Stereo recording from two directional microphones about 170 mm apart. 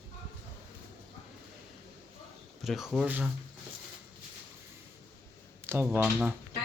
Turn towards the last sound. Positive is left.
turn(degrees=-5)  # may be behind; listen again after turning